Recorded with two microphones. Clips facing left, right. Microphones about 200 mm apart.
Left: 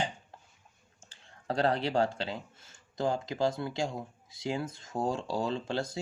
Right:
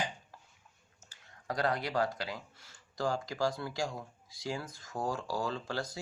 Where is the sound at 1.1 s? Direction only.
30° left (ahead or behind).